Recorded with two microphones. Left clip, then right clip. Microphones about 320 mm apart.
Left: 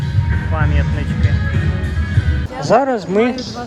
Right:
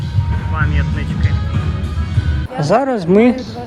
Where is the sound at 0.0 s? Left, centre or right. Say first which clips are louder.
Left 1 dB; centre.